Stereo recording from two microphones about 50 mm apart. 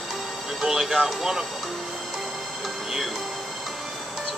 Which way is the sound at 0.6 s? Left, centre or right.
Centre.